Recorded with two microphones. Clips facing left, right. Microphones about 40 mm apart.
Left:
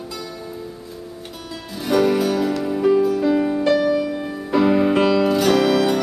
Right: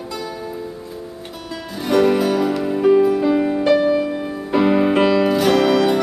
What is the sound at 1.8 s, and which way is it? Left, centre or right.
Music, centre.